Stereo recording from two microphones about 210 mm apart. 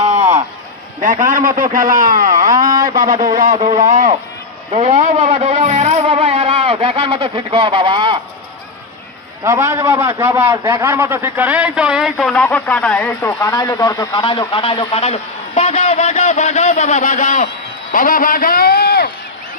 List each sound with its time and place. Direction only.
0.0 s run: 35° right (ahead or behind)
1.0 s music: 40° right (ahead or behind)
1.7 s speech: 40° right (ahead or behind)
2.6 s speech: 15° right (ahead or behind)
3.5 s speech: 30° right (ahead or behind)
5.2 s speech: 25° right (ahead or behind)
5.5 s music: 35° right (ahead or behind)
6.6 s speech: 25° right (ahead or behind)
9.4 s a man's voice: 15° right (ahead or behind); by 19.1 s 45° left (ahead or behind)